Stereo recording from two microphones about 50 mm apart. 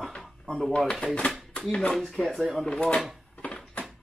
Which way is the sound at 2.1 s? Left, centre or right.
Centre.